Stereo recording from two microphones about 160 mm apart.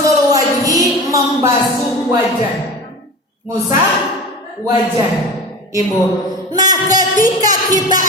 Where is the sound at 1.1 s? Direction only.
20° right (ahead or behind).